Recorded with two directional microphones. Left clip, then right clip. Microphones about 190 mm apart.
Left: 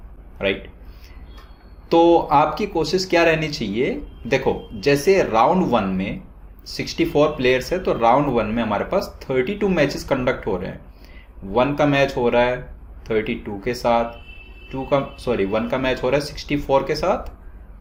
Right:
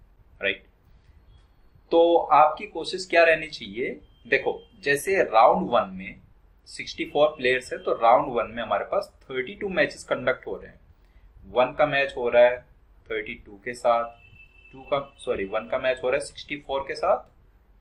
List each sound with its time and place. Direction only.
1.9 s speech: 45° left (ahead or behind)
11.8 s speech: 45° left (ahead or behind)